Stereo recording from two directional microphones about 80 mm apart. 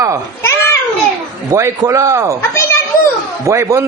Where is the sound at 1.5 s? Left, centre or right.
Right.